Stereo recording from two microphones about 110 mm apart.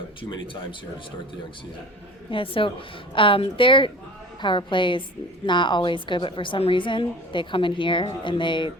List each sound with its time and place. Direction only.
0.2 s a woman's voice: 50° left (ahead or behind)
2.3 s a woman's voice: 55° left (ahead or behind)